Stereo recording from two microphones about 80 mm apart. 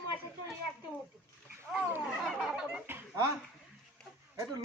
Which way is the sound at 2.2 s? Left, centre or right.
Centre.